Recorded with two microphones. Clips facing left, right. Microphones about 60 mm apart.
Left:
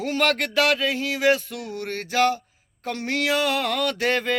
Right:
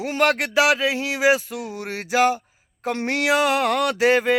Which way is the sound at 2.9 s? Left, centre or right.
Right.